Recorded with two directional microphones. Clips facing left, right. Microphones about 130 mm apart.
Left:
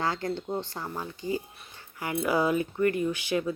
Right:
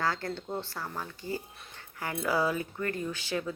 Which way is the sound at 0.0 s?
20° left (ahead or behind).